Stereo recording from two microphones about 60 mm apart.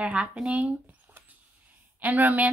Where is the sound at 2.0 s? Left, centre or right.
Right.